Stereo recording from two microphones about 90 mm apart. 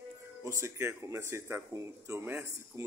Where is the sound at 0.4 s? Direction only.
30° right (ahead or behind).